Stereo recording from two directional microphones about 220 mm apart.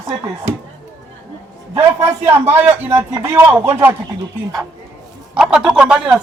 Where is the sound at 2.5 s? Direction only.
10° right (ahead or behind).